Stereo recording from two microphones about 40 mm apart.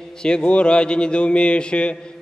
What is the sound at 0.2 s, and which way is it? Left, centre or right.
A man's voice, left.